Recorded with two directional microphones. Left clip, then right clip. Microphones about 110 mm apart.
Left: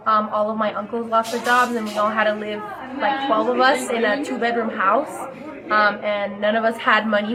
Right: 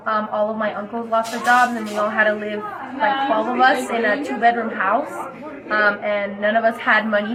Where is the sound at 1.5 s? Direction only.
40° left (ahead or behind).